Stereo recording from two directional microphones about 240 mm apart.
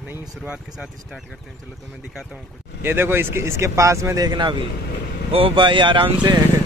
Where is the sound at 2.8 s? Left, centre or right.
Centre.